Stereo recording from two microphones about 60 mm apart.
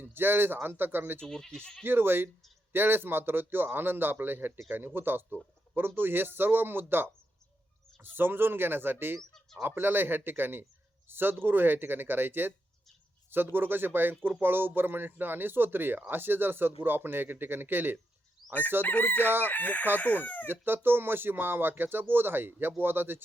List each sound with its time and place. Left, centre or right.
0.0 s speech: right
1.2 s speech: centre
1.8 s speech: right
8.1 s speech: right
18.4 s chicken: centre
18.8 s chicken: left
19.5 s speech: left
20.5 s speech: right